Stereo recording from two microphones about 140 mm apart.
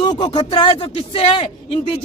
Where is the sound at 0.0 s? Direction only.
30° left (ahead or behind).